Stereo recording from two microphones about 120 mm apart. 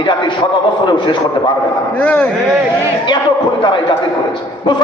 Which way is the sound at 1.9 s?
10° left (ahead or behind).